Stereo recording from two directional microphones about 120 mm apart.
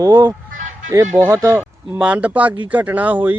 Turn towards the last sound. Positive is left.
turn(degrees=-15)  # may be behind; listen again after turning